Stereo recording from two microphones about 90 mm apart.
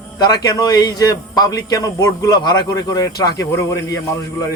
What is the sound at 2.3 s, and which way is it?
A man's voice, 50° left (ahead or behind).